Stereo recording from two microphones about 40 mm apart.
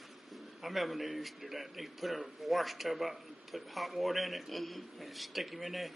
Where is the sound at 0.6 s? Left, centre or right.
Centre.